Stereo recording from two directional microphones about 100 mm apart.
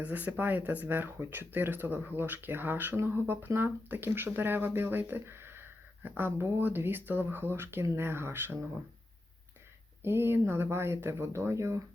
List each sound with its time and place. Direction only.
0.0 s speech: 15° right (ahead or behind)
10.0 s speech: 25° right (ahead or behind)